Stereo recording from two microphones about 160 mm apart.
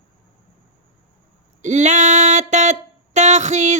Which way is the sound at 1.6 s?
45° right (ahead or behind).